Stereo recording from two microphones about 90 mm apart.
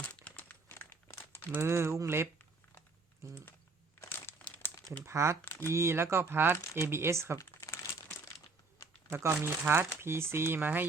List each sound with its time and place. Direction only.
0.0 s crumpling: 15° left (ahead or behind)
1.5 s speech: 25° right (ahead or behind)
4.3 s crumpling: 25° left (ahead or behind)
5.0 s speech: 30° right (ahead or behind)
5.5 s speech: 30° left (ahead or behind)
5.7 s speech: 30° right (ahead or behind)
7.3 s crumpling: 30° left (ahead or behind)
9.0 s speech: 25° right (ahead or behind)